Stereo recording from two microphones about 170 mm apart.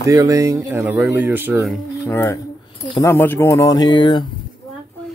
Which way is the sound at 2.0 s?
15° left (ahead or behind).